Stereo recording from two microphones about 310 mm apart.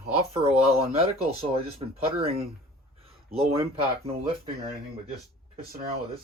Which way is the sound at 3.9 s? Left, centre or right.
Centre.